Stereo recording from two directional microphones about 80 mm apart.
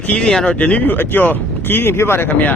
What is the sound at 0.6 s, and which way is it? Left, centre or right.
Speech, centre.